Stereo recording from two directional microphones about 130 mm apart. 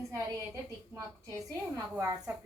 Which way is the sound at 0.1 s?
20° right (ahead or behind).